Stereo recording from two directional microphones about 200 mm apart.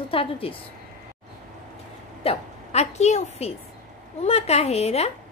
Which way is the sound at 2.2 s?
30° left (ahead or behind).